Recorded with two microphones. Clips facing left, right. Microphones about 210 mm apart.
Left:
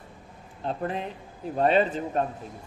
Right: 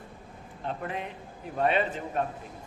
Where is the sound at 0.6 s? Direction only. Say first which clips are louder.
Left 4 dB; 35° left (ahead or behind).